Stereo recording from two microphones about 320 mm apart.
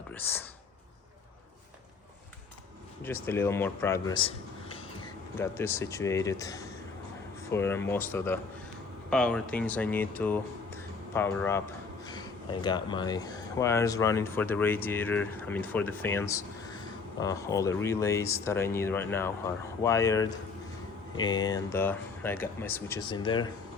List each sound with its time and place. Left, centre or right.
0.1 s speech: centre
3.0 s a man's voice: centre